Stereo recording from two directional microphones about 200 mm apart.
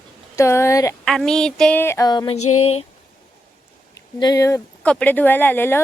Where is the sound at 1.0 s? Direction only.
Centre (ahead or behind); by 2.4 s 20° left (ahead or behind).